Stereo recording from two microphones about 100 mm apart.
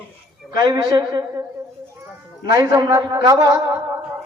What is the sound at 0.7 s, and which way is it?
Speech, 40° right (ahead or behind).